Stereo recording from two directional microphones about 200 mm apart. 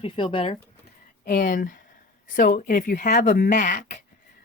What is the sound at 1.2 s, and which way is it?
A woman's voice, 45° left (ahead or behind).